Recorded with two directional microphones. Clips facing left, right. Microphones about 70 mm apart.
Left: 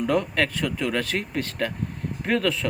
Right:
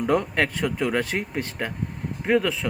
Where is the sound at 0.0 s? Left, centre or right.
Right.